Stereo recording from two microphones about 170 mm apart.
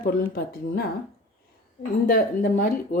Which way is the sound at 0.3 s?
60° left (ahead or behind).